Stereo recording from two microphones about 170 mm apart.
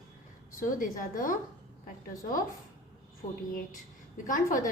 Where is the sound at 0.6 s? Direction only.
55° left (ahead or behind).